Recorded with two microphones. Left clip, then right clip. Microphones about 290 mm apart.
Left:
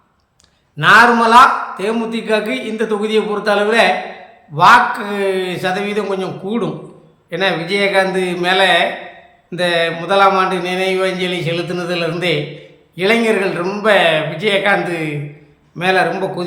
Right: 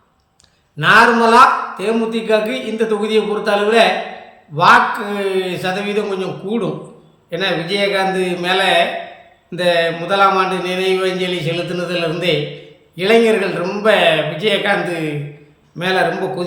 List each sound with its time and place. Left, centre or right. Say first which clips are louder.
0.8 s a man's voice: left 2 dB; centre